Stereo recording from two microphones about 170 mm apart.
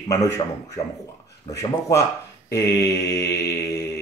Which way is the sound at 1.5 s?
20° left (ahead or behind).